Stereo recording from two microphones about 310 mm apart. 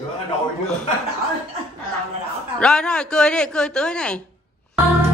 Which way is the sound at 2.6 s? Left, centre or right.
Centre.